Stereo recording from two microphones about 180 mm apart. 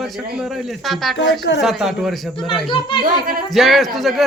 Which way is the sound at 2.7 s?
30° left (ahead or behind).